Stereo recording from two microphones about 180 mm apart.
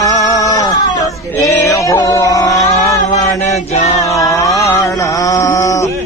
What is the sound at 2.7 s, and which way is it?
Chant, 20° left (ahead or behind).